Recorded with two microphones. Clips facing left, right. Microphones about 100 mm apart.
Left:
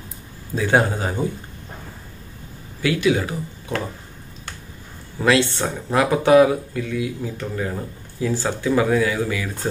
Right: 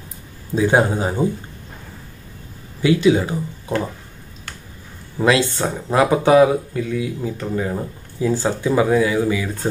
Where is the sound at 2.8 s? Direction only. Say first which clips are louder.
Right 4 dB; 25° right (ahead or behind).